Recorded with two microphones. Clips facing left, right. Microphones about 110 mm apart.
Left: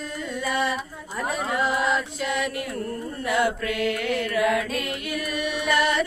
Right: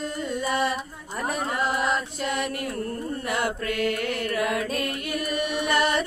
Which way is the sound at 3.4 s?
40° right (ahead or behind).